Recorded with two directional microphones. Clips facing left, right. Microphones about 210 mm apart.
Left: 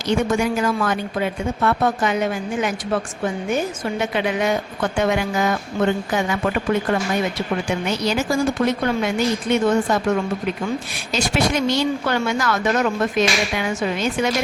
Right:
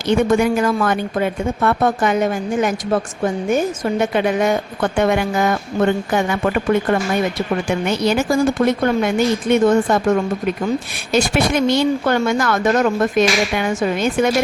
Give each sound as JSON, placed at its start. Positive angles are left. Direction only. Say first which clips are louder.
{"t": 0.1, "sound": "a woman's voice", "louder": "right 4 dB", "side_deg": -55}
{"t": 7.9, "sound": "a woman's voice", "louder": "right 5 dB", "side_deg": -55}
{"t": 11.1, "sound": "a woman's voice", "louder": "right 4 dB", "side_deg": -55}